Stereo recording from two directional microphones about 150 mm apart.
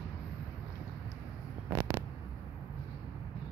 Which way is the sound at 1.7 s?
20° right (ahead or behind).